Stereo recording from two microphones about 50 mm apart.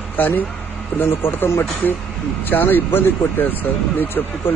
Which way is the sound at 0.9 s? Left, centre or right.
Left.